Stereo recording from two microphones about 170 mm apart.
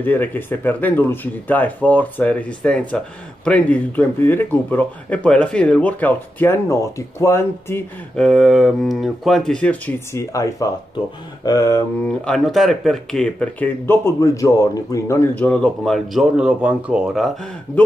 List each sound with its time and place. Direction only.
0.0 s speech: 10° left (ahead or behind)
8.3 s speech: centre (ahead or behind); by 12.1 s 15° left (ahead or behind)
12.1 s speech: centre (ahead or behind)